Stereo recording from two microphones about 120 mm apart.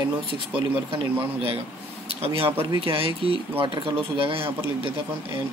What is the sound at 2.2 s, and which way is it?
Speech, 50° right (ahead or behind).